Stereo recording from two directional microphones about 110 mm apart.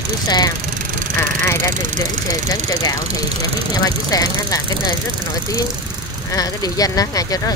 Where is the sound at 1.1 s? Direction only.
25° left (ahead or behind).